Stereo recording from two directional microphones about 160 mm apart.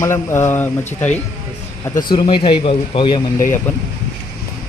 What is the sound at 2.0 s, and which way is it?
Speech, 30° left (ahead or behind).